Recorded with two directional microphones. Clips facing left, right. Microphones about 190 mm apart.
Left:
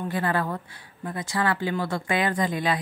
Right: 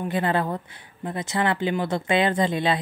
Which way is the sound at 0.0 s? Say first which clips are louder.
Right 2 dB; 20° right (ahead or behind).